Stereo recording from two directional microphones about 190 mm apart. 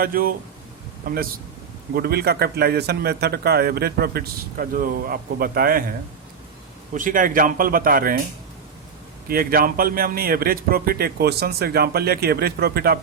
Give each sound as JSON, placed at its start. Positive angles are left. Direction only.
{"t": 0.0, "sound": "a man's voice", "side_deg": -50}
{"t": 6.9, "sound": "speech", "side_deg": -45}
{"t": 9.3, "sound": "a man's voice", "side_deg": -50}